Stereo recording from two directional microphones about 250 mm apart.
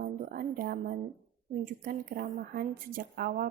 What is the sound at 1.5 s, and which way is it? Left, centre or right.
A woman's voice, right.